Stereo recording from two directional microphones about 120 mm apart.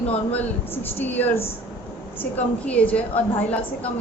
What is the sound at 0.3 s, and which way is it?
Speech, 15° left (ahead or behind).